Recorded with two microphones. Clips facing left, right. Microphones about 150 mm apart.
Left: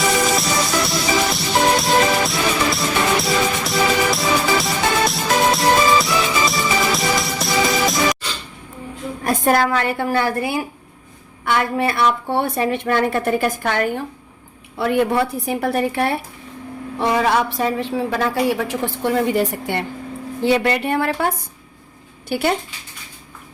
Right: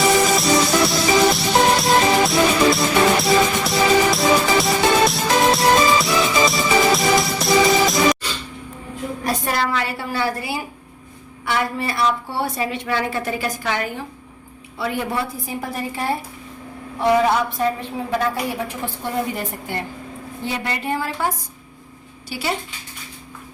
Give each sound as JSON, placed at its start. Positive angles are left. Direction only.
{"t": 0.3, "sound": "music", "side_deg": 0}
{"t": 9.2, "sound": "a woman's voice", "side_deg": 50}
{"t": 17.2, "sound": "a woman's voice", "side_deg": 90}